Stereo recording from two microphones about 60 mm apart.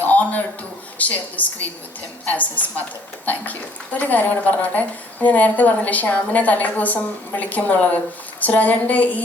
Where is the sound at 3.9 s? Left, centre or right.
Left.